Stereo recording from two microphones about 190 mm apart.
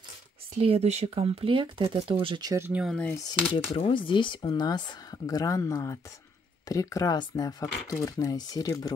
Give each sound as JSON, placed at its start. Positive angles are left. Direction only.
{"t": 0.6, "sound": "speech", "side_deg": -35}
{"t": 3.5, "sound": "speech", "side_deg": 25}